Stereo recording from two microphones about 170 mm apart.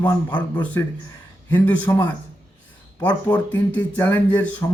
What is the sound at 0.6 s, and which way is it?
A man's voice, 10° left (ahead or behind).